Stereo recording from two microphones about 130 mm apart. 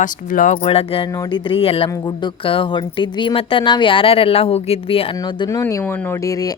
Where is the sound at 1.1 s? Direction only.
30° left (ahead or behind).